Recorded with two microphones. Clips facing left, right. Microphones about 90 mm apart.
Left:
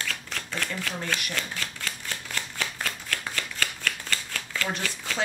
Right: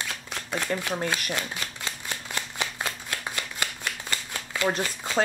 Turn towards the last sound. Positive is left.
turn(degrees=-20)  # may be behind; listen again after turning